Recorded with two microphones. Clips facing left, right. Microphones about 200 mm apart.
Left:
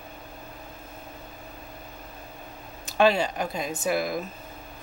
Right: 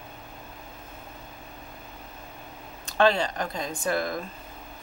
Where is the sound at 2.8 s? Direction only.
10° left (ahead or behind).